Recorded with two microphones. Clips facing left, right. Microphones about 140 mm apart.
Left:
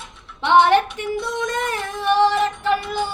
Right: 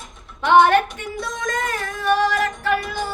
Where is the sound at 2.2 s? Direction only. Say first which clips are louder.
Left 3 dB; 25° left (ahead or behind).